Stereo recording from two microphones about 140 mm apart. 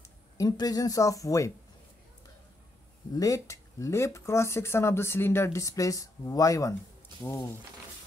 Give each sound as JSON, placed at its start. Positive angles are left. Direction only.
{"t": 0.4, "sound": "speech", "side_deg": 25}
{"t": 3.1, "sound": "speech", "side_deg": 25}